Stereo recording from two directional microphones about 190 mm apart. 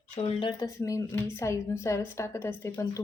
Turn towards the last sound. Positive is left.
turn(degrees=15)  # may be behind; listen again after turning